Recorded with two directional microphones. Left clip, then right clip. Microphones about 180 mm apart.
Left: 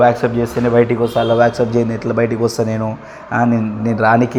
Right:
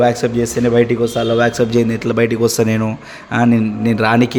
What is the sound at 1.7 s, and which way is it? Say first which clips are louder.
Speech: right 1 dB; 55° right (ahead or behind).